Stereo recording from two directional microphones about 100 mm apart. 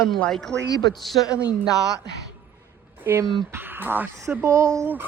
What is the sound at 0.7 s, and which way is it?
Speech, 40° left (ahead or behind).